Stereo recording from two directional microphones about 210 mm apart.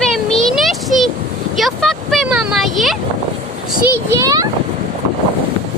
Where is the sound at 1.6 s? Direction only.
Centre (ahead or behind).